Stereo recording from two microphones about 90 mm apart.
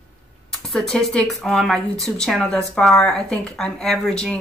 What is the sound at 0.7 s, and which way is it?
A woman's voice, 5° left (ahead or behind).